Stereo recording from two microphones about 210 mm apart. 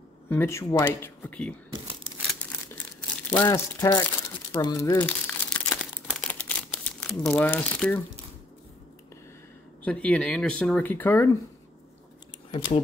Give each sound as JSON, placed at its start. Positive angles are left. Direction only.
{"t": 0.3, "sound": "speech", "side_deg": 10}
{"t": 3.3, "sound": "speech", "side_deg": 10}
{"t": 4.5, "sound": "crumpling", "side_deg": 15}
{"t": 9.8, "sound": "speech", "side_deg": 5}
{"t": 12.4, "sound": "speech", "side_deg": 25}